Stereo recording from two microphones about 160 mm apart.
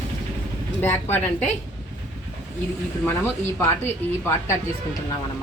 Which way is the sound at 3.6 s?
15° left (ahead or behind).